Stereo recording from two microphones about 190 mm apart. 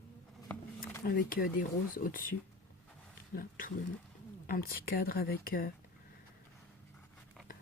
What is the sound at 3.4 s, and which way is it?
Speech, 50° left (ahead or behind).